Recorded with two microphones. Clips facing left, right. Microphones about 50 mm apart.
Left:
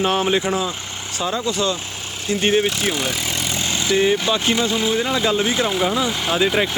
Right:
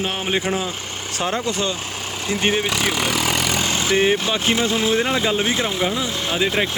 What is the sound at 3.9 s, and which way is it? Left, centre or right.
Speech, right.